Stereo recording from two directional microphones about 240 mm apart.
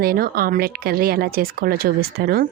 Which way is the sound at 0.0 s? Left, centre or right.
Right.